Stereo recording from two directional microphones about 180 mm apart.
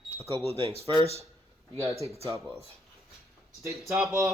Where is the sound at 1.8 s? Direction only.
15° right (ahead or behind).